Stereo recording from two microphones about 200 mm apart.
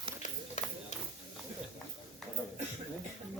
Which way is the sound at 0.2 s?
35° left (ahead or behind).